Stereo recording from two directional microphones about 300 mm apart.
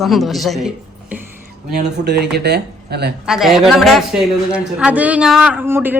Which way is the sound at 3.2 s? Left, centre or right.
Centre.